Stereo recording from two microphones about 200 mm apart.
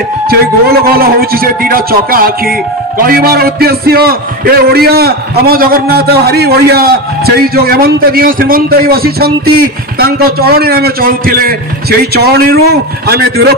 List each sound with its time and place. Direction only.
0.3 s a man's voice: 50° right (ahead or behind)